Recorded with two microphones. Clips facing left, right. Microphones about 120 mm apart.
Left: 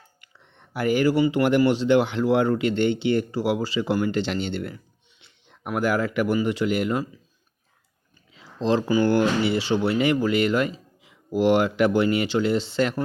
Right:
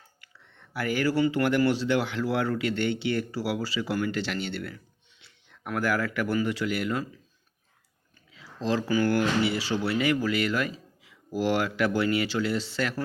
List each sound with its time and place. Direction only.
0.2 s speech: 20° left (ahead or behind)
8.3 s speech: 25° left (ahead or behind)